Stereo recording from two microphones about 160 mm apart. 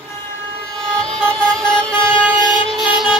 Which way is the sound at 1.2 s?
5° left (ahead or behind).